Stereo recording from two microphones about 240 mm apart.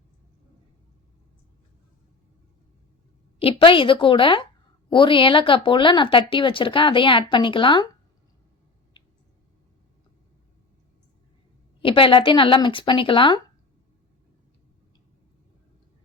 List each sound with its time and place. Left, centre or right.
3.3 s speech: left
11.8 s speech: left